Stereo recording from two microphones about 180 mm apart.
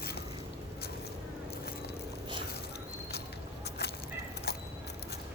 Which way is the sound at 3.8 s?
65° left (ahead or behind).